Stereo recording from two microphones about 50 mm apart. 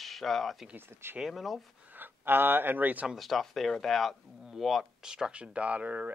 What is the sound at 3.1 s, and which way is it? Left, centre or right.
Speech, centre.